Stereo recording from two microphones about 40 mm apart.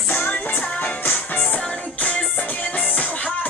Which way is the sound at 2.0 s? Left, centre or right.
Left.